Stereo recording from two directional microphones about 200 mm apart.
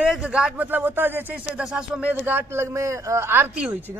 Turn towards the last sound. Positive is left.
turn(degrees=-10)  # may be behind; listen again after turning